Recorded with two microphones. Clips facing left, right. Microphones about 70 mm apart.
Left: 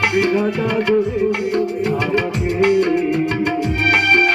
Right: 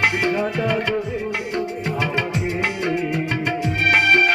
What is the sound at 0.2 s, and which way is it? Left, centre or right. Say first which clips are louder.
Music: left 4 dB; centre.